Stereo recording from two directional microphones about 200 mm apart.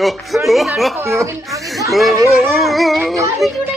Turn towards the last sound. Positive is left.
turn(degrees=0)  # may be behind; listen again after turning